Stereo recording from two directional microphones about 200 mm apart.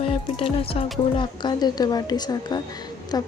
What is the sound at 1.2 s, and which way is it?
A woman's voice, 20° left (ahead or behind).